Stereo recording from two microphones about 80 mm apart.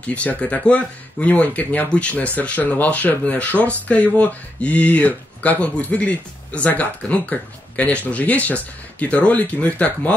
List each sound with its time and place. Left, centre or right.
0.0 s speech: centre